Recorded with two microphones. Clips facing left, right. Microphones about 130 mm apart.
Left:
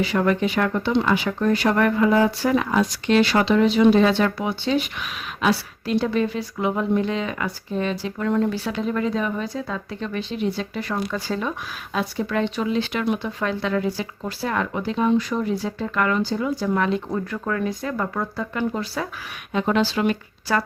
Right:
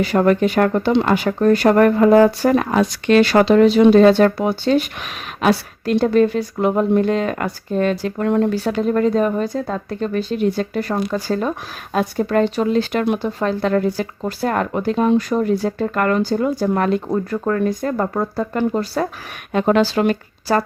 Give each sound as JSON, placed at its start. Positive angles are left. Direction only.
{"t": 0.0, "sound": "speech", "side_deg": -45}
{"t": 17.1, "sound": "speech", "side_deg": -35}
{"t": 17.6, "sound": "speech", "side_deg": -45}
{"t": 19.5, "sound": "speech", "side_deg": -55}